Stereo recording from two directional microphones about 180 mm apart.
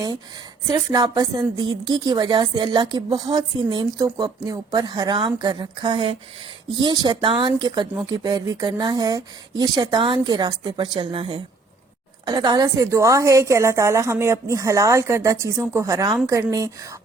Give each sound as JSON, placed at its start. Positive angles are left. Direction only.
{"t": 0.7, "sound": "a woman's voice", "side_deg": -20}